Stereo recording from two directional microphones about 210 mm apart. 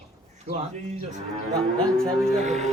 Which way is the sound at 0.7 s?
35° right (ahead or behind).